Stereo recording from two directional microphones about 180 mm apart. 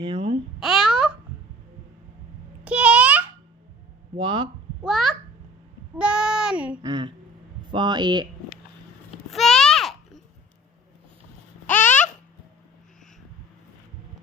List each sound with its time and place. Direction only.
0.0 s babbling: 30° right (ahead or behind)
0.6 s babbling: centre (ahead or behind)
2.6 s a sound: 5° right (ahead or behind)
4.2 s speech: 25° right (ahead or behind)
4.8 s a child's voice: 5° right (ahead or behind)
6.8 s speech: 25° right (ahead or behind)
9.3 s babbling: centre (ahead or behind)
11.6 s babbling: 10° left (ahead or behind)